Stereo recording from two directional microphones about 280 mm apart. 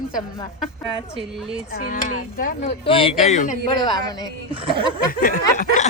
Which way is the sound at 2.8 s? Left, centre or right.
Centre.